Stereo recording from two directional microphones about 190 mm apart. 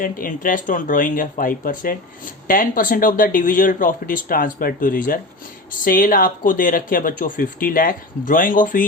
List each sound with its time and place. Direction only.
0.0 s speech: 45° left (ahead or behind)